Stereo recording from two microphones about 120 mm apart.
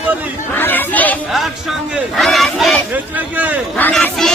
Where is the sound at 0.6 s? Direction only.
15° left (ahead or behind).